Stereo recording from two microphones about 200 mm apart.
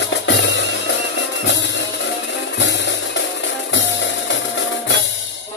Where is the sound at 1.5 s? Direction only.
65° left (ahead or behind).